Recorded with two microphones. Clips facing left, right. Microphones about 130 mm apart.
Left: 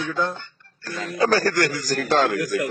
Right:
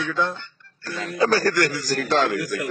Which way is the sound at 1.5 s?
45° left (ahead or behind).